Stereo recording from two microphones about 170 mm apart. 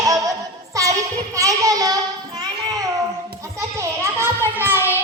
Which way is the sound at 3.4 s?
15° right (ahead or behind).